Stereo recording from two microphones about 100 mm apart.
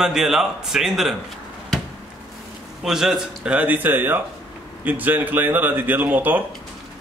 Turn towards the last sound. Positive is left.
turn(degrees=-15)  # may be behind; listen again after turning